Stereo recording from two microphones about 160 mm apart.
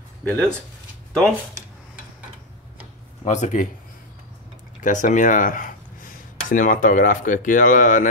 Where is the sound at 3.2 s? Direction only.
45° left (ahead or behind).